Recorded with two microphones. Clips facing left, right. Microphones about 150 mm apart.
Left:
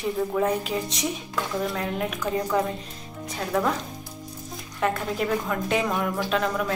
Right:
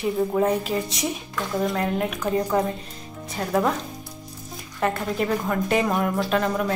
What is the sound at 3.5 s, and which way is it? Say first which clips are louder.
Speech: right 2 dB; 10° right (ahead or behind).